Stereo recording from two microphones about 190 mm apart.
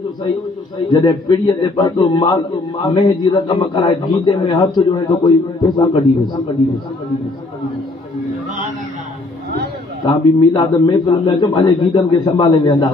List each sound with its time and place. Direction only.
0.8 s a man's voice: 20° left (ahead or behind)
10.0 s a man's voice: 25° left (ahead or behind)